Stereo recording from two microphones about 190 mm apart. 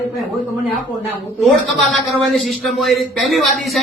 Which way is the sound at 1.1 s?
Centre (ahead or behind).